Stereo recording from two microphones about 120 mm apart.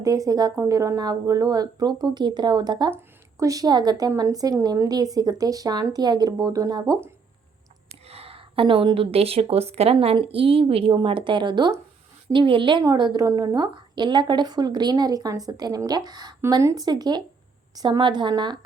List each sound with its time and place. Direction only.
0.0 s a woman's voice: 30° right (ahead or behind)
8.0 s a woman's voice: 55° right (ahead or behind)
12.8 s a woman's voice: 30° right (ahead or behind)